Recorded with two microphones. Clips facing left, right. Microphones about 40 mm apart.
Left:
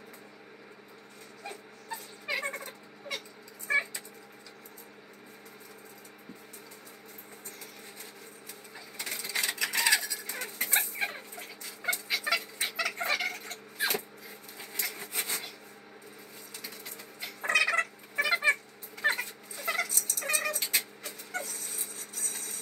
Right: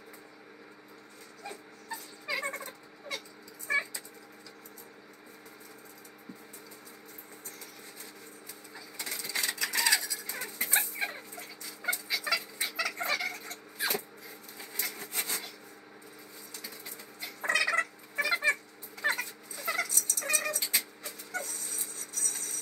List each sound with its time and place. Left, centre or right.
1.4 s dog: left
3.1 s a sound: left
3.6 s cat: left
9.0 s a sound: left
11.9 s cat: left
14.8 s wood: left
17.2 s cat: centre
20.6 s music: left
21.4 s a sound: centre